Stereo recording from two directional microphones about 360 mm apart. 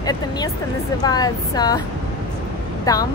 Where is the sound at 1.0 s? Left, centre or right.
Centre.